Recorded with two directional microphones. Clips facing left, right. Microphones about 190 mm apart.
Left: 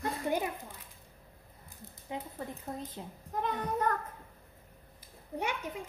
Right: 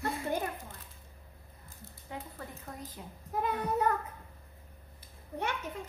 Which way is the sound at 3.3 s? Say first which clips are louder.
Right 2 dB; 10° right (ahead or behind).